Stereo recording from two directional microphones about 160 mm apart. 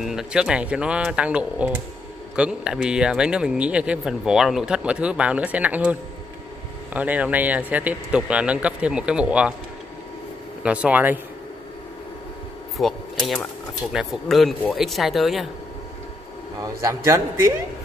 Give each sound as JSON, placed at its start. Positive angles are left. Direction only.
{"t": 0.0, "sound": "speech", "side_deg": -5}
{"t": 10.6, "sound": "speech", "side_deg": -10}
{"t": 12.7, "sound": "speech", "side_deg": 0}
{"t": 16.8, "sound": "speech", "side_deg": -15}